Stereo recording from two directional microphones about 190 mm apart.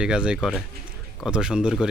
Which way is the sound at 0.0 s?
5° right (ahead or behind).